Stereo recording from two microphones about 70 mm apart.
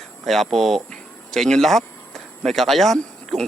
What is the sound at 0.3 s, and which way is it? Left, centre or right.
A man's voice, centre.